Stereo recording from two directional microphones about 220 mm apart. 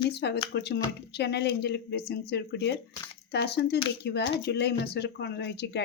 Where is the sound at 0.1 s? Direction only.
50° left (ahead or behind).